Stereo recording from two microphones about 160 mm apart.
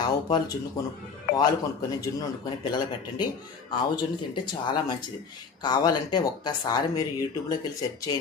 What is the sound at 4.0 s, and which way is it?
Speech, 30° left (ahead or behind).